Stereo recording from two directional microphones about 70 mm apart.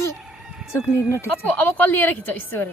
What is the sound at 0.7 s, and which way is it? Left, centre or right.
Speech, left.